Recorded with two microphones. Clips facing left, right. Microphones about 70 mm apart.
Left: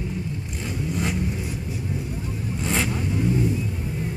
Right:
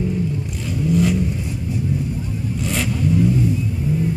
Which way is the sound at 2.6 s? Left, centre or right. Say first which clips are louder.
Even; left.